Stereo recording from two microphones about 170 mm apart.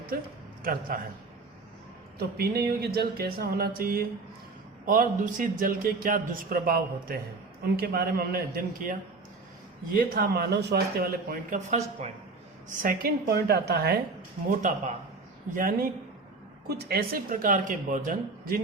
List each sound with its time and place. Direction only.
0.1 s speech: 60° right (ahead or behind)
2.1 s a man's voice: 65° right (ahead or behind)
11.7 s speech: 40° right (ahead or behind)
12.8 s speech: 60° right (ahead or behind)
15.5 s speech: 55° right (ahead or behind)